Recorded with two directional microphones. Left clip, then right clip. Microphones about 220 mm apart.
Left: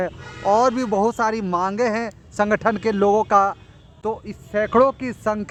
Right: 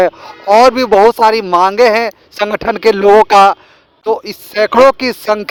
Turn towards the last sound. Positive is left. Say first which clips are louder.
# right 10 dB
turn(degrees=-40)  # may be behind; listen again after turning